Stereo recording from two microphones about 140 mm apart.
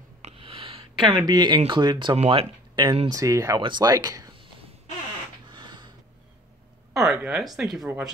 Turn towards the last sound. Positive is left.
turn(degrees=0)  # may be behind; listen again after turning